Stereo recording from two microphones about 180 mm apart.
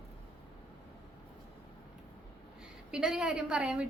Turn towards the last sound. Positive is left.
turn(degrees=-5)  # may be behind; listen again after turning